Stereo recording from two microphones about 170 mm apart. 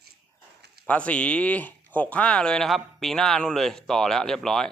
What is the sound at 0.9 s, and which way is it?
Speech, 10° left (ahead or behind).